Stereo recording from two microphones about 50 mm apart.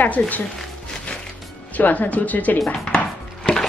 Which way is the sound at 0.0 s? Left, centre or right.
Left.